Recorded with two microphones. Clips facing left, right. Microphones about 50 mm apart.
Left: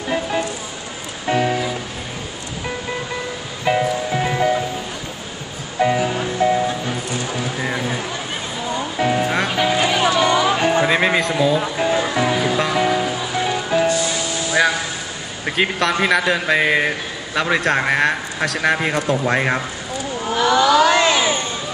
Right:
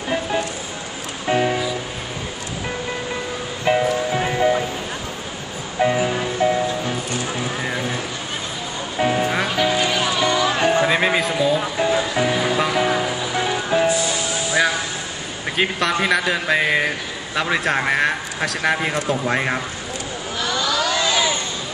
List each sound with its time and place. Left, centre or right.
1.2 s music: centre
3.6 s music: centre
5.8 s music: centre
7.6 s a sound: centre
8.9 s music: centre
10.7 s music: centre
15.5 s a man's voice: centre
20.3 s a sound: left
20.9 s crowd: left